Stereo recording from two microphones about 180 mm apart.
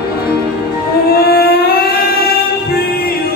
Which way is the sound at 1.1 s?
60° left (ahead or behind).